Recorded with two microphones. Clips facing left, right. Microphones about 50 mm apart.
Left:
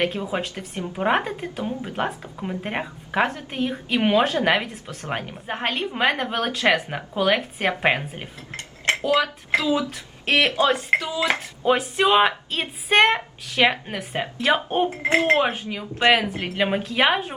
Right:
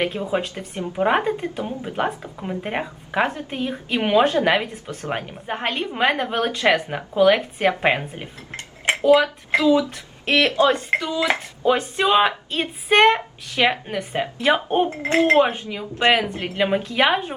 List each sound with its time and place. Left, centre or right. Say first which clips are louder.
0.0 s a woman's voice: right 2 dB; centre
8.5 s dishes: right 1 dB; right
9.0 s a woman's voice: right 7 dB; centre
10.4 s speech: right 4 dB; centre
10.7 s a woman's voice: right 1 dB; centre
14.8 s a woman's voice: left 1 dB; centre